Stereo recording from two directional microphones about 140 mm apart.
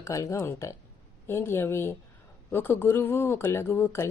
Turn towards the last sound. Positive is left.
turn(degrees=15)  # may be behind; listen again after turning